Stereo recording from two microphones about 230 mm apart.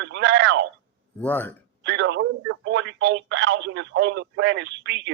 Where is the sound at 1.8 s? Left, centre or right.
Right.